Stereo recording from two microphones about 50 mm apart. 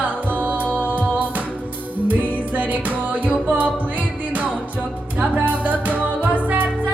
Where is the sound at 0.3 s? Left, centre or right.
Right.